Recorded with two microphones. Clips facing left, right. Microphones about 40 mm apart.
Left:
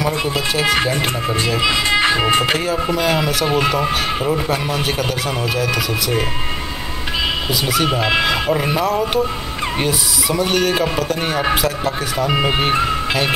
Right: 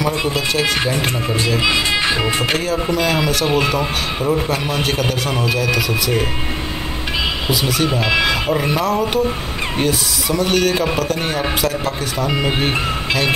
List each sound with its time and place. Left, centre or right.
0.3 s speech: centre
1.9 s speech: left
2.5 s speech: centre
7.6 s speech: centre
12.3 s speech: centre
12.5 s speech: centre